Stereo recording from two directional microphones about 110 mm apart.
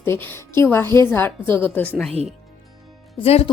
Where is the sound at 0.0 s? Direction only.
20° left (ahead or behind).